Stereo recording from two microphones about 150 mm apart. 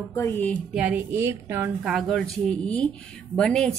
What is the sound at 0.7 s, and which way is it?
Speech, 10° right (ahead or behind).